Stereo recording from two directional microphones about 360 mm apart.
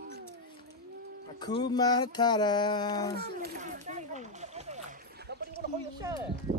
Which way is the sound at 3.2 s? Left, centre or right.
Right.